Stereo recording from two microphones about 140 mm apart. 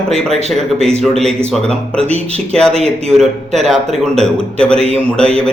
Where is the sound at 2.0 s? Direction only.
45° right (ahead or behind).